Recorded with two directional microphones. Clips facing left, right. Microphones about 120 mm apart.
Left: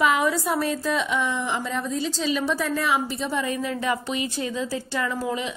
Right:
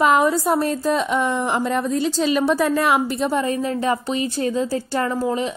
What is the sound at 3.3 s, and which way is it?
A woman's voice, 40° right (ahead or behind).